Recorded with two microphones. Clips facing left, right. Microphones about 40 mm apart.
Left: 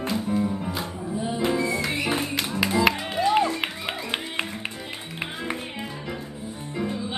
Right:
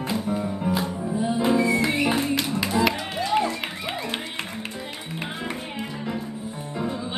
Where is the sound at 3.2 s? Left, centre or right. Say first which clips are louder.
Left 2 dB; centre.